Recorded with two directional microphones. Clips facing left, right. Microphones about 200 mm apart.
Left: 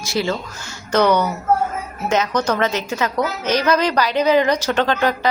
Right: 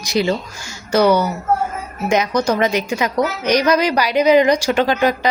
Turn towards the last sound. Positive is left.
turn(degrees=-10)  # may be behind; listen again after turning